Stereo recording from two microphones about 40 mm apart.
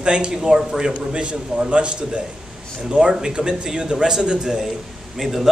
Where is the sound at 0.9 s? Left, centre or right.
Right.